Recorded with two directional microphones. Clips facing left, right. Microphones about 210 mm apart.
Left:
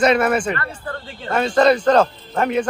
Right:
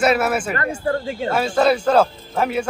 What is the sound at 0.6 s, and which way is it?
Speech, 50° right (ahead or behind).